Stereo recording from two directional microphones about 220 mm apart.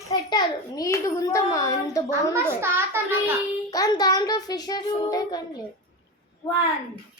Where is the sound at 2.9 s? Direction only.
10° right (ahead or behind).